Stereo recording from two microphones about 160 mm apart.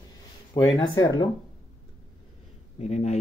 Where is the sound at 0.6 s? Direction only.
20° left (ahead or behind).